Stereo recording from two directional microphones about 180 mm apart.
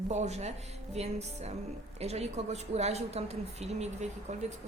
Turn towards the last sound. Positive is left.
turn(degrees=-40)  # may be behind; listen again after turning